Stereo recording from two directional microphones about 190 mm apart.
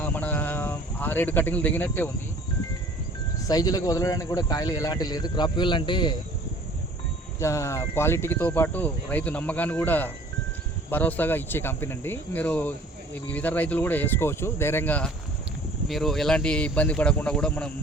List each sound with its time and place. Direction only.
0.0 s a sound: 10° left (ahead or behind)
3.4 s speech: 20° left (ahead or behind)
7.3 s speech: 15° left (ahead or behind)